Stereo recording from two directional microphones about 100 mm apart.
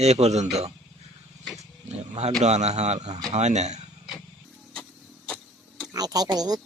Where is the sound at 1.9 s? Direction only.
90° right.